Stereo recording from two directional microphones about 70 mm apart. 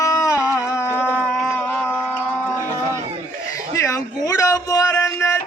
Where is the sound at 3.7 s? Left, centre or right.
Left.